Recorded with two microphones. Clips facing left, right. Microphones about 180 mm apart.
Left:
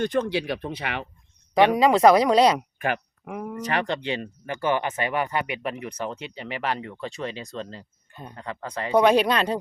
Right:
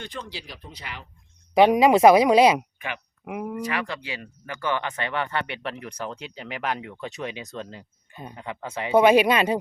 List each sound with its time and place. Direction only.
0.0 s speech: 50° left (ahead or behind); by 1.0 s 65° left (ahead or behind)
1.7 s speech: 15° right (ahead or behind)
2.7 s speech: 45° left (ahead or behind)
3.2 s speech: 10° right (ahead or behind)
3.7 s speech: 30° left (ahead or behind); by 9.6 s 10° right (ahead or behind)